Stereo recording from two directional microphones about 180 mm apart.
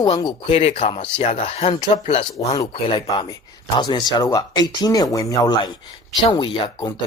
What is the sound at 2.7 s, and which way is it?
Speech, 30° left (ahead or behind).